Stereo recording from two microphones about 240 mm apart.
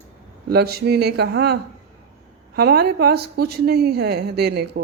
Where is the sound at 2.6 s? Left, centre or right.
Right.